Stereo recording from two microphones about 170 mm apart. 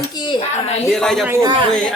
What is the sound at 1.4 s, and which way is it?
Speech, 30° right (ahead or behind).